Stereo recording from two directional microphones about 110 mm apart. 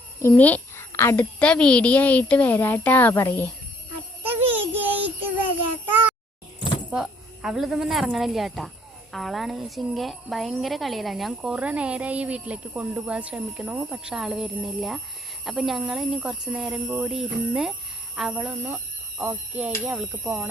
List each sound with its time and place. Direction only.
0.2 s a child's voice: 20° left (ahead or behind)
1.4 s speech: 10° left (ahead or behind)
4.2 s child singing: 15° right (ahead or behind)
6.9 s speech: 5° right (ahead or behind)